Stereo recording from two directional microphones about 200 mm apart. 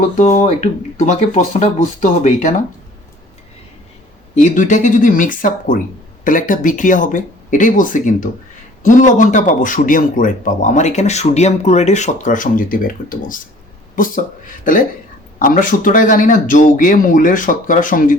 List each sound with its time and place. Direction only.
0.2 s speech: 35° left (ahead or behind)
4.4 s a man's voice: 40° left (ahead or behind)